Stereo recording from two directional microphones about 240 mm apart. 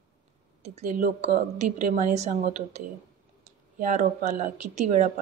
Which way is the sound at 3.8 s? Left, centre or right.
Right.